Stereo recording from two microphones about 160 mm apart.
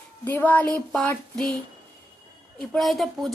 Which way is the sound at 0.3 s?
10° left (ahead or behind).